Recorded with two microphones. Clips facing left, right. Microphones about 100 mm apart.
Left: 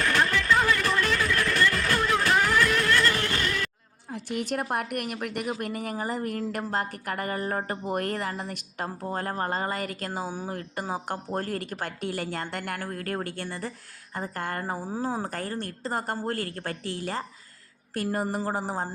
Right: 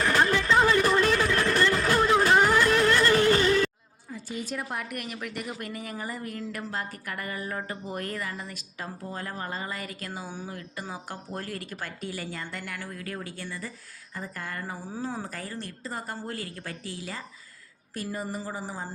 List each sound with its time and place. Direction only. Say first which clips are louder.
0.0 s a sound: right 1 dB; 15° right (ahead or behind)
4.1 s a woman's voice: left 4 dB; 65° left (ahead or behind)
17.9 s a woman's voice: left 5 dB; 70° left (ahead or behind)